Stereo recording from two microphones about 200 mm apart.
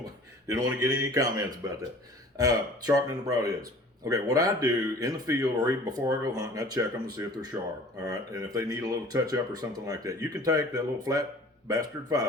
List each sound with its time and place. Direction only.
0.0 s a man's voice: 15° right (ahead or behind)